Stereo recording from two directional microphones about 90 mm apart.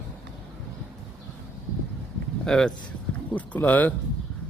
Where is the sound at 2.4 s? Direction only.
10° left (ahead or behind).